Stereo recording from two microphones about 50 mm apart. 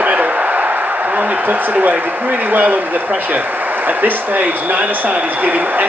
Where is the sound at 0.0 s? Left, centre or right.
Right.